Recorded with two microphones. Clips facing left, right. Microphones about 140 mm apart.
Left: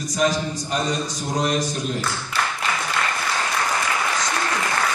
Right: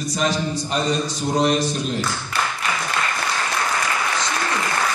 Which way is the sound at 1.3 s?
30° right (ahead or behind).